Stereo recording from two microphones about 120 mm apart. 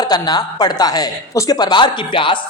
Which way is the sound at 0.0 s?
35° left (ahead or behind).